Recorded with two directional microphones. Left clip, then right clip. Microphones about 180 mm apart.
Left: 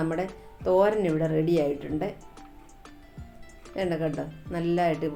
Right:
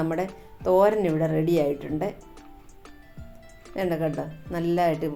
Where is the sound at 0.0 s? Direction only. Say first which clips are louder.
Right 2 dB; 35° right (ahead or behind).